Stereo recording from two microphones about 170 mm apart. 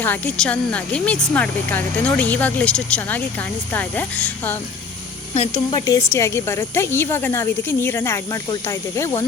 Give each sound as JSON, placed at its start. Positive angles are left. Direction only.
{"t": 0.0, "sound": "speech", "side_deg": 10}
{"t": 5.3, "sound": "speech", "side_deg": 40}
{"t": 5.8, "sound": "speech", "side_deg": 20}